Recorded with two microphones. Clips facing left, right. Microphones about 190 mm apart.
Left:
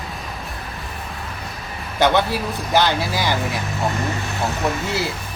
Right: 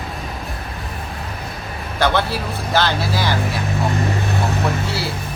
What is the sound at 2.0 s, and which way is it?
Speech, 20° left (ahead or behind).